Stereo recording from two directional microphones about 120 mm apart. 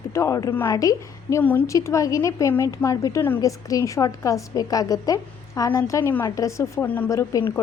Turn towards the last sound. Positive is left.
turn(degrees=25)  # may be behind; listen again after turning